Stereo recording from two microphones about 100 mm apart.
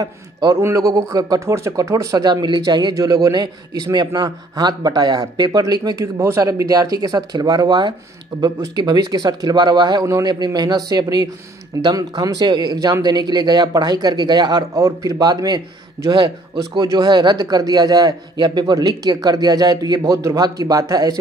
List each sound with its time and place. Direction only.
0.0 s speech: 40° right (ahead or behind)